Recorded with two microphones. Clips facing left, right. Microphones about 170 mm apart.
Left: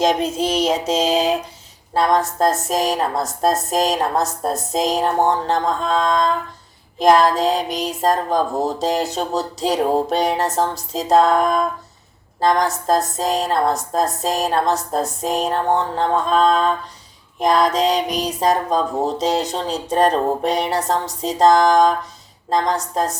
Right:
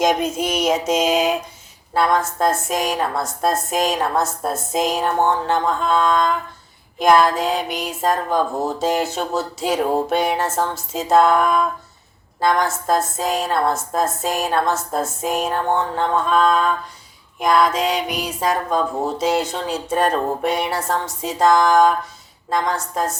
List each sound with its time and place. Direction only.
0.0 s a woman's voice: 30° left (ahead or behind)